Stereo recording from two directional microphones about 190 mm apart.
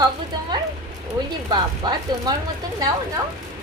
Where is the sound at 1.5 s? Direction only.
25° right (ahead or behind).